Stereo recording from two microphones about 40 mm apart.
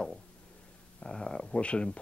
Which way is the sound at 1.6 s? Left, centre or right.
Left.